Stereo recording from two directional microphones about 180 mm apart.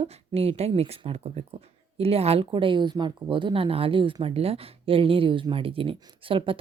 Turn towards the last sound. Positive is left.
turn(degrees=-30)  # may be behind; listen again after turning